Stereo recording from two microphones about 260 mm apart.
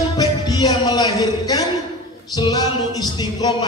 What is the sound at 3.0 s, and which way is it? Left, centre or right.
Music, centre.